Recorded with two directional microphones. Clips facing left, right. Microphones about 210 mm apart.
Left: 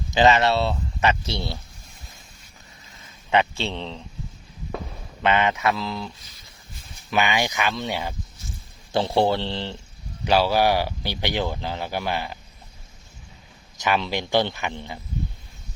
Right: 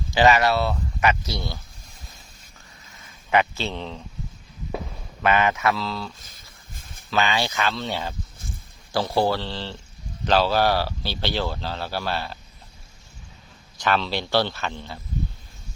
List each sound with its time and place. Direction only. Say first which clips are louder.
0.1 s speech: even; 20° left (ahead or behind)
3.3 s speech: even; 25° left (ahead or behind)
3.7 s speech: even; 10° right (ahead or behind)
5.2 s speech: even; 25° left (ahead or behind)
6.1 s a sound: even; 50° right (ahead or behind)
7.1 s speech: left 1 dB; 15° left (ahead or behind)
13.8 s speech: even; 15° left (ahead or behind)